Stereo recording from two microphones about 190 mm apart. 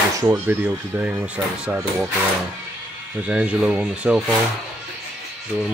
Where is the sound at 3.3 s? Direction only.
5° right (ahead or behind).